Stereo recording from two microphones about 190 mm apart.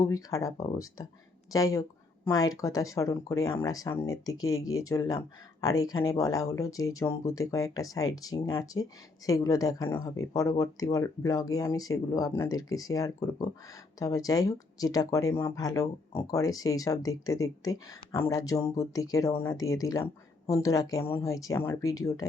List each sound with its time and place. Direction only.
0.0 s speech: 15° left (ahead or behind)